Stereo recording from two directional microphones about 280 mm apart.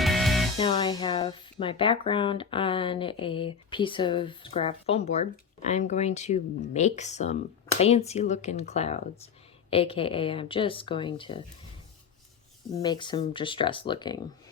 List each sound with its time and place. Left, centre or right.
0.0 s music: centre
0.6 s speech: centre
12.7 s speech: centre